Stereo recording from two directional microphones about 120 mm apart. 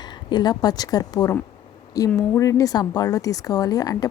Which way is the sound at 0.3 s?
35° left (ahead or behind).